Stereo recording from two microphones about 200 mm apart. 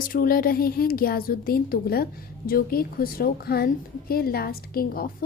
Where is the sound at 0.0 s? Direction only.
45° left (ahead or behind).